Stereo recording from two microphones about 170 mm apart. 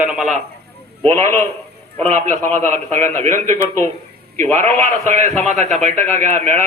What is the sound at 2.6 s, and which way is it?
A man's voice, 40° right (ahead or behind).